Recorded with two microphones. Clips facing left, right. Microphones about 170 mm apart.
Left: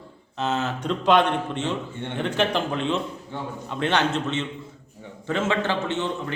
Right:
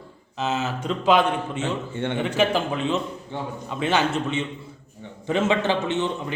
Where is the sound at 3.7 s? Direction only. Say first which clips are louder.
Even; 5° right (ahead or behind).